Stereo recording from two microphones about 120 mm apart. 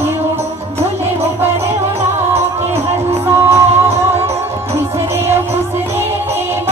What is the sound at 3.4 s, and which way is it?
Music, 20° right (ahead or behind).